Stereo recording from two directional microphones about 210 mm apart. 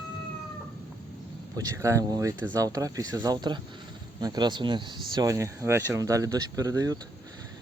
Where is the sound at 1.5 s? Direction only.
15° right (ahead or behind).